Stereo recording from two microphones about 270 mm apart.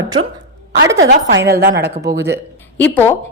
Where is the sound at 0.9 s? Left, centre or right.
Right.